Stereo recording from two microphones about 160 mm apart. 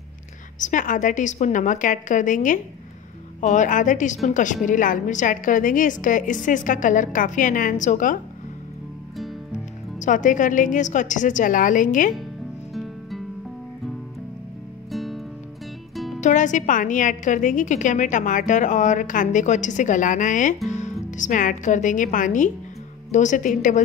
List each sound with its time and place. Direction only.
0.6 s a woman's voice: 55° left (ahead or behind)
9.9 s a woman's voice: 50° left (ahead or behind)
14.9 s music: centre (ahead or behind)
16.2 s a woman's voice: 50° left (ahead or behind)